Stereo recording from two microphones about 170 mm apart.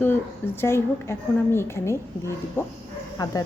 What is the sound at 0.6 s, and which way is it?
A woman's voice, 15° left (ahead or behind).